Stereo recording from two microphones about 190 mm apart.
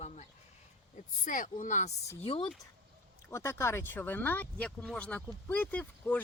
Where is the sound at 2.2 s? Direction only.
30° left (ahead or behind).